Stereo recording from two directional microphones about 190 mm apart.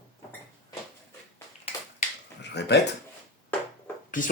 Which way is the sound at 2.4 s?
65° left (ahead or behind).